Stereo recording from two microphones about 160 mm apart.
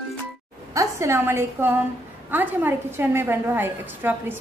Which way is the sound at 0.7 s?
20° right (ahead or behind).